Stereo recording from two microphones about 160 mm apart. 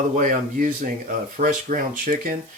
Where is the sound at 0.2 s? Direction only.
60° right (ahead or behind).